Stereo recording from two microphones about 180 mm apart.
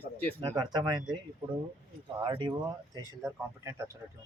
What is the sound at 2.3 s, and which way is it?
Speech, 25° right (ahead or behind).